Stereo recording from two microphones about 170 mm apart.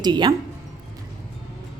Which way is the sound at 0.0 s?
25° right (ahead or behind).